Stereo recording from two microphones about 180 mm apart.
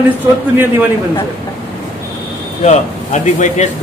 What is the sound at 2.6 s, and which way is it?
Speech, 40° left (ahead or behind).